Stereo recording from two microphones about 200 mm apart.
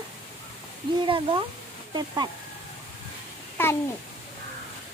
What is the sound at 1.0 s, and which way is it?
Speech, 25° right (ahead or behind).